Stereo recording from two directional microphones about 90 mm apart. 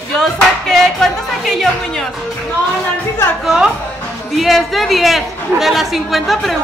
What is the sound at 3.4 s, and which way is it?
Speech, 5° right (ahead or behind).